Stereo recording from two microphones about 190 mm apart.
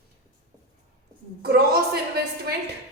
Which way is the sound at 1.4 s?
55° right (ahead or behind).